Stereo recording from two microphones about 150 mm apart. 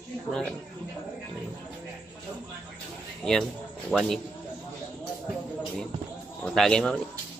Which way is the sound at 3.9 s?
Centre (ahead or behind).